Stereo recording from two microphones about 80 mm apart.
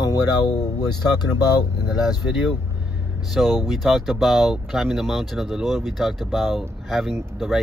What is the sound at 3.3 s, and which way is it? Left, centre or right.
Speech, centre.